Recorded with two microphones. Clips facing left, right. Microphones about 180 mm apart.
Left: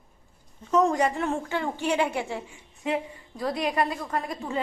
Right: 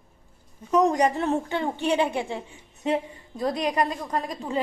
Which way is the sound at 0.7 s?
15° right (ahead or behind).